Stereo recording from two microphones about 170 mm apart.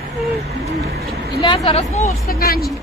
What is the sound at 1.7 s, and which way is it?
Speech, 40° left (ahead or behind).